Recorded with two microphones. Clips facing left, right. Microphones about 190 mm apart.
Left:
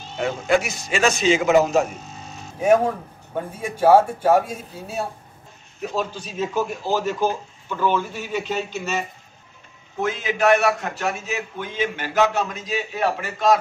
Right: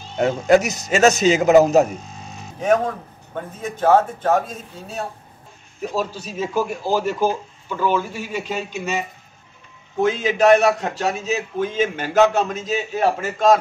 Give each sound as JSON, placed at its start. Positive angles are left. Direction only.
{"t": 0.2, "sound": "a man's voice", "side_deg": -40}
{"t": 2.6, "sound": "speech", "side_deg": 10}
{"t": 5.8, "sound": "speech", "side_deg": -5}
{"t": 10.0, "sound": "a man's voice", "side_deg": -35}